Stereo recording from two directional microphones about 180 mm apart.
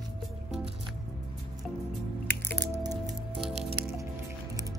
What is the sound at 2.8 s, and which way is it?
Music, 20° right (ahead or behind).